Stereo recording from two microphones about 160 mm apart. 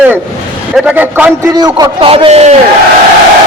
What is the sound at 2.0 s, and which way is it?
Speech, 35° right (ahead or behind).